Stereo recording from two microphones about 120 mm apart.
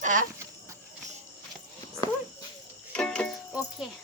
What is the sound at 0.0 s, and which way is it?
Speech, 90° right.